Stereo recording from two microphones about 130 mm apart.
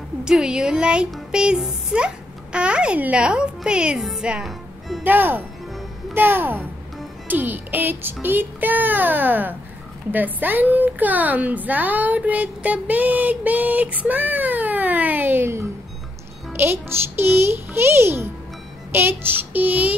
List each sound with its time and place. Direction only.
0.2 s speech: 5° right (ahead or behind)
5.0 s a woman's voice: 15° right (ahead or behind)